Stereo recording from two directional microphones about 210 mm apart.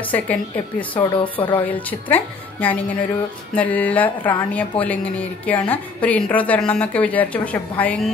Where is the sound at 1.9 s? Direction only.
10° left (ahead or behind).